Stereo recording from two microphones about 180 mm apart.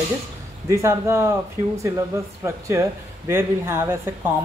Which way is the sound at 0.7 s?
15° right (ahead or behind).